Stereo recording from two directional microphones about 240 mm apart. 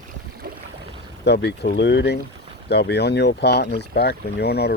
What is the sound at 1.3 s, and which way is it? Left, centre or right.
Speech, left.